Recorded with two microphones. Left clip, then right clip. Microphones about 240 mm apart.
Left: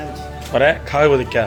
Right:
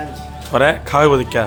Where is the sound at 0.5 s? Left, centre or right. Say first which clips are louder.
Right 1 dB; centre.